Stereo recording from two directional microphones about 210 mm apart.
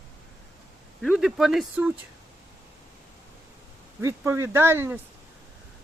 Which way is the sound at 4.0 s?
15° right (ahead or behind).